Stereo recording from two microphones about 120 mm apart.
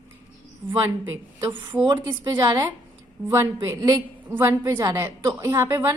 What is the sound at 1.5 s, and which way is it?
A woman's voice, 40° right (ahead or behind).